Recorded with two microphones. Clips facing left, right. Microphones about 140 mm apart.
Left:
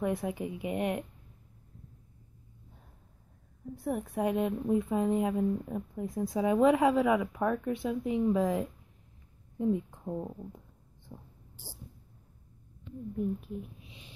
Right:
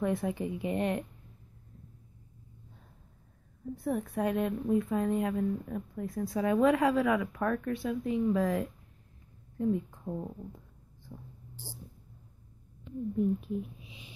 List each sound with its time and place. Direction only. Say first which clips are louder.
0.0 s a woman's voice: right 1 dB; 10° left (ahead or behind)
3.7 s a woman's voice: right 1 dB; 10° left (ahead or behind)
13.4 s a sound: right 5 dB; 5° right (ahead or behind)